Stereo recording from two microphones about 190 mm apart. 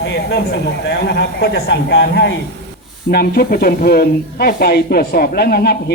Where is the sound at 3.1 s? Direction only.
55° left (ahead or behind).